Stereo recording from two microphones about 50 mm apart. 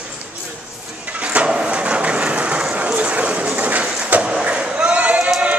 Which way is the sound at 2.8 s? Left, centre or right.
Right.